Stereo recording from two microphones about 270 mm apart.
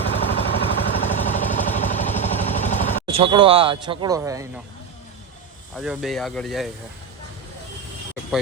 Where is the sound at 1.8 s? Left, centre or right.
Left.